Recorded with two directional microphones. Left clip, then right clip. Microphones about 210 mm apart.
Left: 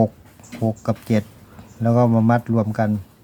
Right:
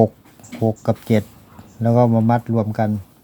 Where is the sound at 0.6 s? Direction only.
20° right (ahead or behind).